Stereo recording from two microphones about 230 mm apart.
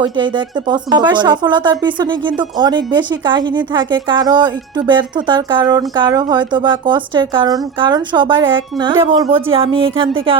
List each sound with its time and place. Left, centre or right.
0.0 s speech: centre